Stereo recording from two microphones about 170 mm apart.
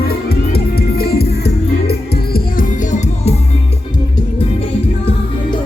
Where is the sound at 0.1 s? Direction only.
65° left (ahead or behind).